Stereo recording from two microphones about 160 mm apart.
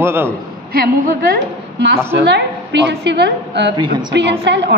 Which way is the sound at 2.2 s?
90° right.